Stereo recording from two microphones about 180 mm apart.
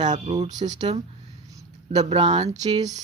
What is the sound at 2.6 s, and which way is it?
Speech, 20° right (ahead or behind).